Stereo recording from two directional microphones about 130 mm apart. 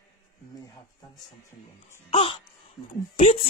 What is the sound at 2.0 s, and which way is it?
Speech, 40° left (ahead or behind).